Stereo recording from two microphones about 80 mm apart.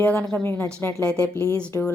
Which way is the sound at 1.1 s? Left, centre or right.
Centre.